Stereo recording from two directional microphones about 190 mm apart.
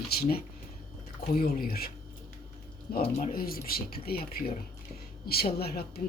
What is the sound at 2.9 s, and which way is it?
Speech, 45° left (ahead or behind).